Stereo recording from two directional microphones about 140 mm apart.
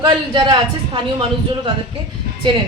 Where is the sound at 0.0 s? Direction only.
30° right (ahead or behind).